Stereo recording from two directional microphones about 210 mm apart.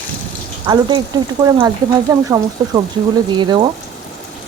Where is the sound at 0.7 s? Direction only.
20° right (ahead or behind).